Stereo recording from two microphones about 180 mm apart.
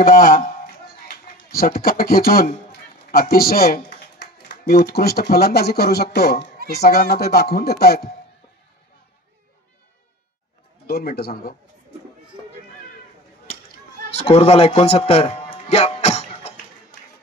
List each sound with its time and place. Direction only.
0.0 s a man's voice: 50° left (ahead or behind)
10.9 s speech: 60° left (ahead or behind)
14.1 s a man's voice: 35° left (ahead or behind)